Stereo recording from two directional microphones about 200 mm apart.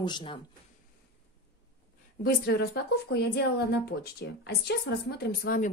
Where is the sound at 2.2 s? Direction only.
50° left (ahead or behind).